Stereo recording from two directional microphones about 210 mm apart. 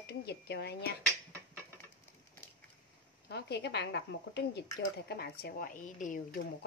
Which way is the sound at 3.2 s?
50° left (ahead or behind).